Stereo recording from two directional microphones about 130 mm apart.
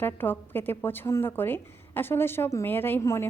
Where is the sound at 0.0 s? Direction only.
15° left (ahead or behind).